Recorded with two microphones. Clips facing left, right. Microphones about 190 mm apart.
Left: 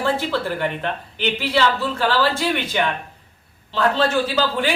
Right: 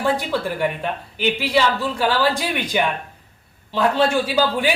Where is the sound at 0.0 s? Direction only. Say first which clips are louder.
Even; 15° right (ahead or behind).